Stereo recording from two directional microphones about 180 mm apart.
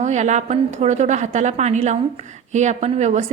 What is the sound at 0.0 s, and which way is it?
A woman's voice, 40° right (ahead or behind).